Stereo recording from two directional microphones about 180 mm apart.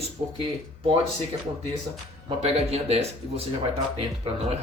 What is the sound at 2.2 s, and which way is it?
Speech, 35° right (ahead or behind).